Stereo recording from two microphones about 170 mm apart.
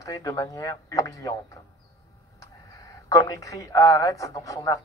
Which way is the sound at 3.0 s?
20° left (ahead or behind).